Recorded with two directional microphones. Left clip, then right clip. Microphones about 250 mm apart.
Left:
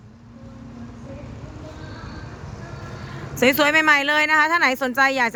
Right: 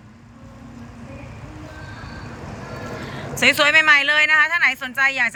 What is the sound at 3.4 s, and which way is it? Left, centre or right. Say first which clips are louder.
A woman's voice: right 2 dB; centre.